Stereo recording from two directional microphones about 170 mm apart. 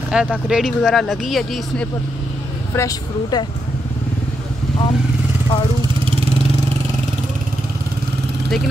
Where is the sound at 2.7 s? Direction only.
20° left (ahead or behind).